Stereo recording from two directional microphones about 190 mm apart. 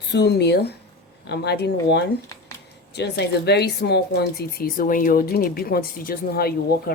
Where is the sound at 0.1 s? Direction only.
60° left (ahead or behind).